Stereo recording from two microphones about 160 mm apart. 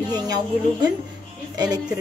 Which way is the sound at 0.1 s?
25° right (ahead or behind).